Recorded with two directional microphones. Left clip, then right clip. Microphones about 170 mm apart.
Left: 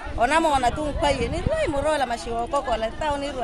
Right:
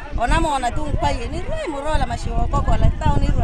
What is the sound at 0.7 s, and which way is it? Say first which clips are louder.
Speech: even; 45° left (ahead or behind).